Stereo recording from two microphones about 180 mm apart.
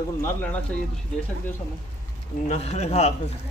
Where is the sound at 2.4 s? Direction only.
40° left (ahead or behind).